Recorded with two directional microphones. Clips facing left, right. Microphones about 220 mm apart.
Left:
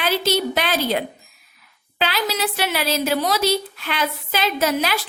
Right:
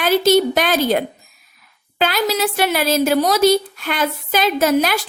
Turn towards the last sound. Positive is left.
turn(degrees=-50)  # may be behind; listen again after turning